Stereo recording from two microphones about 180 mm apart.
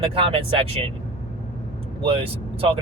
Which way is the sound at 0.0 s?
30° right (ahead or behind).